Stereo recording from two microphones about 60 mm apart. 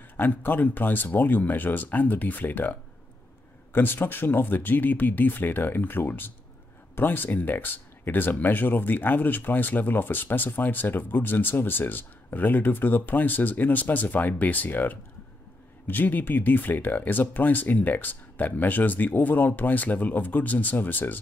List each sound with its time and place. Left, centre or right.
0.2 s speech: left